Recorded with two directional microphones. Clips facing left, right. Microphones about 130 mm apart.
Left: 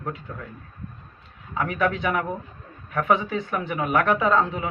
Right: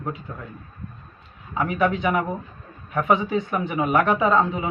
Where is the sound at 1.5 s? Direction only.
15° right (ahead or behind).